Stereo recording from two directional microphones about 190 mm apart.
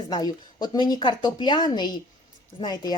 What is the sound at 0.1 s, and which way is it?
Speech, 20° left (ahead or behind).